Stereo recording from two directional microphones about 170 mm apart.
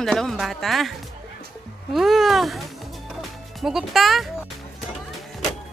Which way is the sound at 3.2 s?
Centre (ahead or behind).